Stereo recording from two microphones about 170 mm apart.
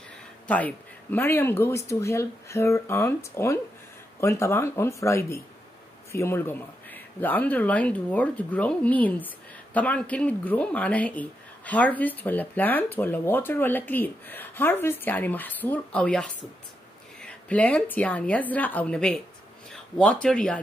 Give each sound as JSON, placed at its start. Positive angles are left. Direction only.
{"t": 0.5, "sound": "speech", "side_deg": 10}